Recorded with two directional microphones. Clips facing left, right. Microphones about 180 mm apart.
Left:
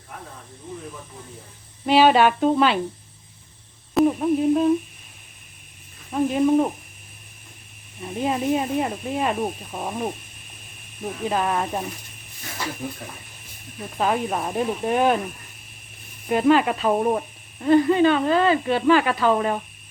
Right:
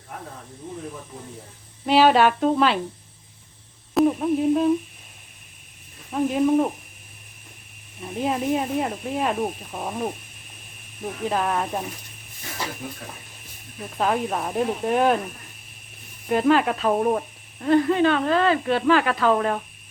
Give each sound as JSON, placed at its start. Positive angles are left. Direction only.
{"t": 1.9, "sound": "speech", "side_deg": 0}
{"t": 3.9, "sound": "humming", "side_deg": 0}
{"t": 6.1, "sound": "speech", "side_deg": 0}
{"t": 8.0, "sound": "speech", "side_deg": 0}
{"t": 11.3, "sound": "speech", "side_deg": 0}
{"t": 14.0, "sound": "speech", "side_deg": 5}
{"t": 16.3, "sound": "speech", "side_deg": 0}